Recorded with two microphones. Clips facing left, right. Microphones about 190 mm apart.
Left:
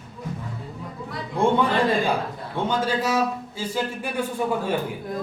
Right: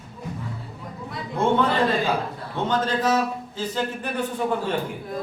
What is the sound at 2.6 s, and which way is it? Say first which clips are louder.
A man's voice: right 1 dB; 10° left (ahead or behind).